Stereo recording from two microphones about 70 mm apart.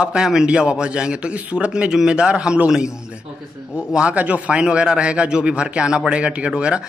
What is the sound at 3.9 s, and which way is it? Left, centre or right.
A man's voice, centre.